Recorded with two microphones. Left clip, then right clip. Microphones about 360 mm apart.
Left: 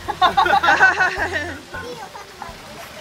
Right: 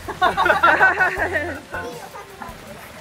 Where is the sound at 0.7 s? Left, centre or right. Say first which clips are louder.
Left 1 dB; centre.